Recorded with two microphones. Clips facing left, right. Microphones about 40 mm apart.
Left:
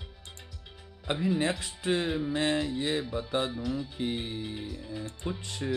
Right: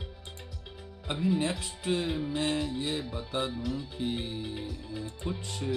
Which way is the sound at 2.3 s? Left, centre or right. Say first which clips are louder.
Left 2 dB; left.